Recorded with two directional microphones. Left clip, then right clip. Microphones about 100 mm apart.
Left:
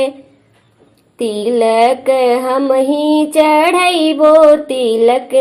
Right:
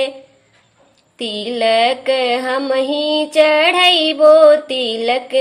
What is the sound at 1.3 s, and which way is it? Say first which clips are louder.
Music: left 3 dB; 30° left (ahead or behind).